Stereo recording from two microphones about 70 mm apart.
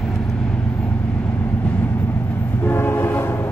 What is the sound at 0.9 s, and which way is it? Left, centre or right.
Train, left.